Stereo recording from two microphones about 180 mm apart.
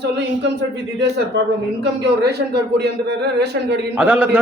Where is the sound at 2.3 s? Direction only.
65° right (ahead or behind).